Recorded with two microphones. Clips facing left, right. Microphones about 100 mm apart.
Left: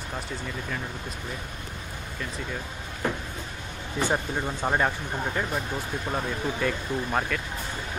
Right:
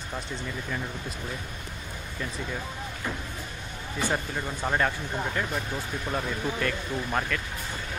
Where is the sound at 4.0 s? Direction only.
20° left (ahead or behind).